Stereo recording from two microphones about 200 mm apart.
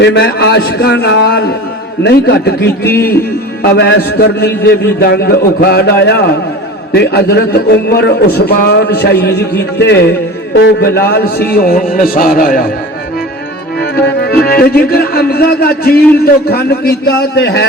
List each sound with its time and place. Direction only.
0.0 s a man's voice: 60° left (ahead or behind)
13.7 s music: 55° left (ahead or behind)
16.2 s a man's voice: 50° left (ahead or behind)